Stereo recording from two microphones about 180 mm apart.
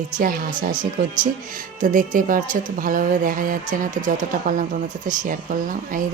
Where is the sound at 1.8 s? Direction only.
45° right (ahead or behind).